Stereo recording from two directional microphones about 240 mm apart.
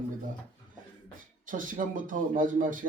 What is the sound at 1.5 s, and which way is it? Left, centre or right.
Speech, right.